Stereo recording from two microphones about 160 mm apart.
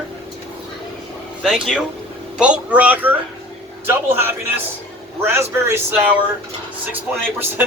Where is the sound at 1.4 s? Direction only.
Centre (ahead or behind).